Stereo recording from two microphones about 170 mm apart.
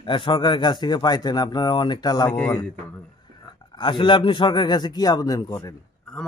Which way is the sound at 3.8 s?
30° left (ahead or behind).